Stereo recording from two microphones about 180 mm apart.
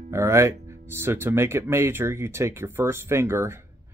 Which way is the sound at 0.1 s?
15° right (ahead or behind).